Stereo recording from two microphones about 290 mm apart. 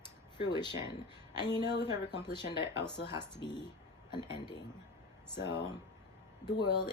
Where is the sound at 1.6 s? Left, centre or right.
Left.